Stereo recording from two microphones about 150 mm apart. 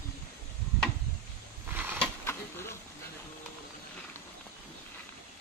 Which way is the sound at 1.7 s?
15° right (ahead or behind).